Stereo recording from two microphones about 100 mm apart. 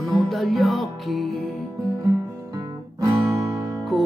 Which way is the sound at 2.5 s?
35° right (ahead or behind).